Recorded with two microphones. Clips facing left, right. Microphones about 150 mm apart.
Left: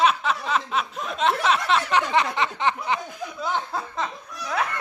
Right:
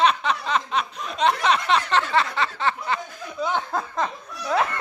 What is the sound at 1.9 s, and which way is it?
Speech, 15° left (ahead or behind).